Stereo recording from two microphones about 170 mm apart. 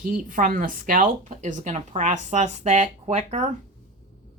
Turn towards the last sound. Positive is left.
turn(degrees=-45)  # may be behind; listen again after turning